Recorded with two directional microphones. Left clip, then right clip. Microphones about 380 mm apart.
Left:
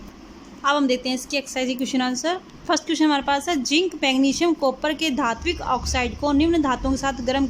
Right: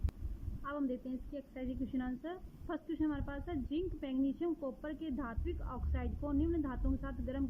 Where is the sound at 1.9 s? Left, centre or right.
Centre.